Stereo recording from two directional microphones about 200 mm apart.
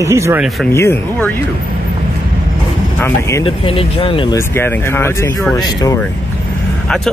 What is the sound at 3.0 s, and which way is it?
Speech, 15° left (ahead or behind).